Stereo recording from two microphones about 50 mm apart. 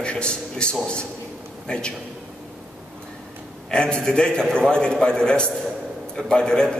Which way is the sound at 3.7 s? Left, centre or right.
Centre.